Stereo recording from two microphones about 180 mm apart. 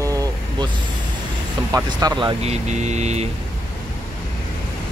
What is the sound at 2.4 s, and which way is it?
Vehicle, 40° right (ahead or behind).